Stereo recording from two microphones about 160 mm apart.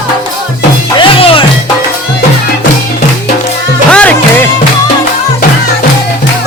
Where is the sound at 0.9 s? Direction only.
35° left (ahead or behind).